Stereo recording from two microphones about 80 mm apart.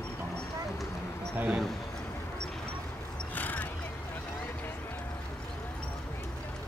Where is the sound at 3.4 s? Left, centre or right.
Left.